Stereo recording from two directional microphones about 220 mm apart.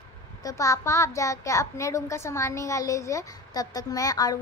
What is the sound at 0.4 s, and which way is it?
A woman's voice, 15° left (ahead or behind).